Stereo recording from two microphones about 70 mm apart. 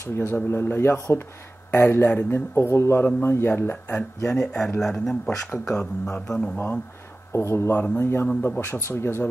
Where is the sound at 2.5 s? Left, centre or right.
Left.